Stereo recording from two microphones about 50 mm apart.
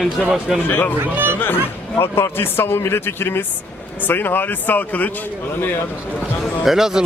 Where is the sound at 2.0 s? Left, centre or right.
Left.